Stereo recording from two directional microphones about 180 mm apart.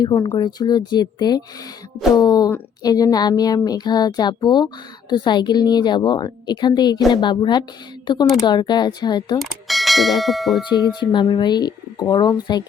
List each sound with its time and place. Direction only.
0.0 s speech: 25° left (ahead or behind)
9.4 s speech: centre (ahead or behind)
10.7 s speech: 25° left (ahead or behind)